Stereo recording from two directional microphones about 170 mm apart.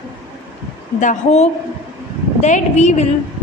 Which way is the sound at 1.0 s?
45° left (ahead or behind).